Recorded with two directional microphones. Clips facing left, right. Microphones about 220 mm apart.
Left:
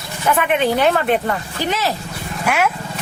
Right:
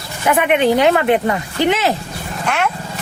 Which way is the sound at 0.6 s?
15° right (ahead or behind).